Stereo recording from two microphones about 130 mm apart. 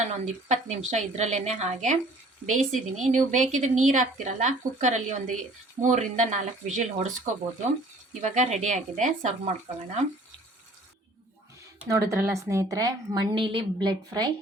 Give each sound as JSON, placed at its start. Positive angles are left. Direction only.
{"t": 0.4, "sound": "speech", "side_deg": -60}
{"t": 2.5, "sound": "a woman's voice", "side_deg": -70}
{"t": 8.2, "sound": "speech", "side_deg": -65}
{"t": 11.9, "sound": "speech", "side_deg": -25}
{"t": 13.3, "sound": "a woman's voice", "side_deg": -40}